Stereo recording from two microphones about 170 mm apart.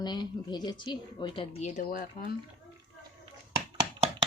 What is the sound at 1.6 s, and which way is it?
Speech, 50° left (ahead or behind).